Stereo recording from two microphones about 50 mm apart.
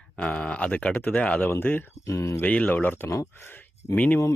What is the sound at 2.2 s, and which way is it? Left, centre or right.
Speech, left.